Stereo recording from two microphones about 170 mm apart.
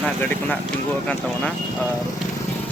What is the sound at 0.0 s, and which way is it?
Speech, 10° left (ahead or behind).